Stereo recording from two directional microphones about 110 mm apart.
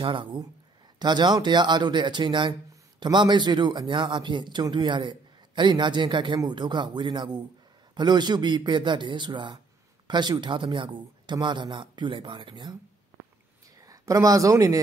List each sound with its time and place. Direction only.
0.0 s a man's voice: 50° right (ahead or behind)
13.8 s speech: 30° right (ahead or behind)